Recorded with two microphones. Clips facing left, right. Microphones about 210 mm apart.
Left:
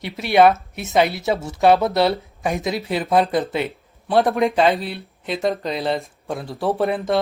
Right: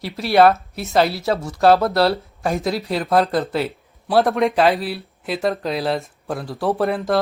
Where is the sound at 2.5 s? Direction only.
Centre (ahead or behind).